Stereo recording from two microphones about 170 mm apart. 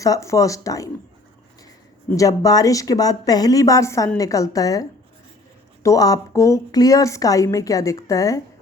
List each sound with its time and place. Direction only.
0.0 s a woman's voice: 20° left (ahead or behind)
2.1 s a woman's voice: 20° left (ahead or behind)